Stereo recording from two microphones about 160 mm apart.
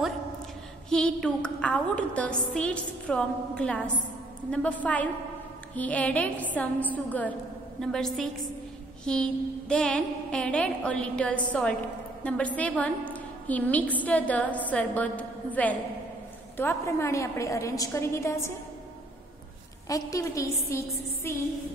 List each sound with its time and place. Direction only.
0.8 s a woman's voice: 5° left (ahead or behind)
19.9 s a woman's voice: 20° left (ahead or behind)